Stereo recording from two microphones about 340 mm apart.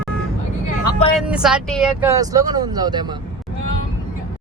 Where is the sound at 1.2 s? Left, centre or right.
Centre.